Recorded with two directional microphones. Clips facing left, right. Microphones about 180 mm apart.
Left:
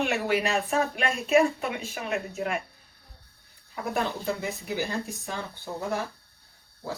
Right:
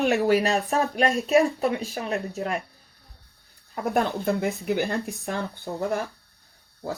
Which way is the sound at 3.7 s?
55° right (ahead or behind).